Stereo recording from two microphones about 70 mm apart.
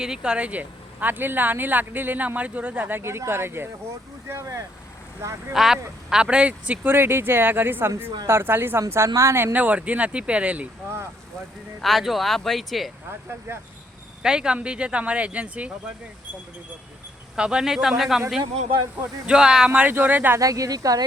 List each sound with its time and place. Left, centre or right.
0.0 s speech: centre; by 5.5 s right
5.5 s speech: centre
6.8 s speech: right
9.0 s speech: right
9.3 s speech: right
11.8 s speech: centre
13.5 s speech: right
14.2 s speech: centre
17.3 s speech: centre
19.2 s speech: centre; by 20.4 s right
20.4 s speech: right